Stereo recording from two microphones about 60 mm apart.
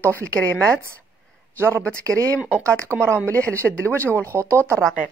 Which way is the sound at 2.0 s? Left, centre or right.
Right.